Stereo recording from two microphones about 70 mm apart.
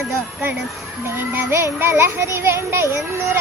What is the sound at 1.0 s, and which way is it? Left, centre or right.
A child's voice, right.